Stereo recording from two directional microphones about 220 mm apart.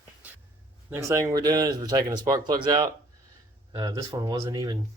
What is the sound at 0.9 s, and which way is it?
Speech, 15° right (ahead or behind).